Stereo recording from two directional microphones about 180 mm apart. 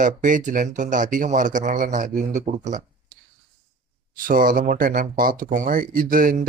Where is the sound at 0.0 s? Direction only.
45° right (ahead or behind).